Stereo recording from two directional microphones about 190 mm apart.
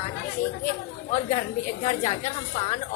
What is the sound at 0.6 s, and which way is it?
A woman's voice, 40° left (ahead or behind).